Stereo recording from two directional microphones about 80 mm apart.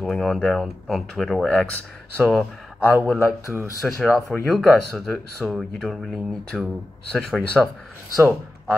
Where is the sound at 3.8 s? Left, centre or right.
Centre.